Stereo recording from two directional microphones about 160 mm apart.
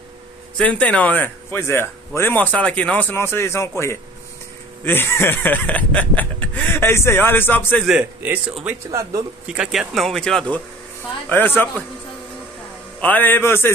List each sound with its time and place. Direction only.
0.6 s speech: 5° left (ahead or behind)
7.8 s a man's voice: 10° right (ahead or behind)
9.5 s speech: 5° right (ahead or behind); by 11.8 s 10° left (ahead or behind)
13.0 s speech: 10° left (ahead or behind)